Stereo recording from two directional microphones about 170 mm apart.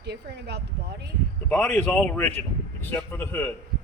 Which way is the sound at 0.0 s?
80° right.